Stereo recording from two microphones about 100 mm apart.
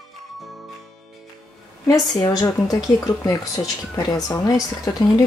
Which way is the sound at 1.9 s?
35° left (ahead or behind).